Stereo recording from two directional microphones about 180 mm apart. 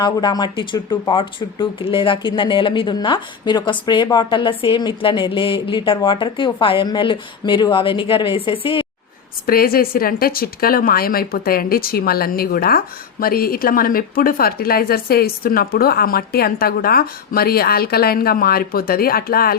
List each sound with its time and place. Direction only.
0.0 s speech: 25° left (ahead or behind)
9.5 s speech: 55° left (ahead or behind)